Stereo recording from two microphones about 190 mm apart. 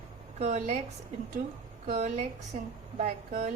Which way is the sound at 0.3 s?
35° right (ahead or behind).